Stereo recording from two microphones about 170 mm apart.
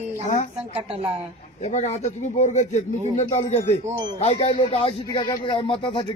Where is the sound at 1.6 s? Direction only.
40° left (ahead or behind).